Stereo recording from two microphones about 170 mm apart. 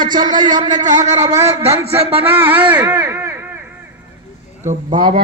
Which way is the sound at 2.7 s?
10° right (ahead or behind).